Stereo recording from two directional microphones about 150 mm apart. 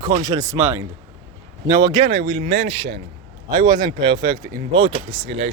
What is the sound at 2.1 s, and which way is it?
Speech, 90° right.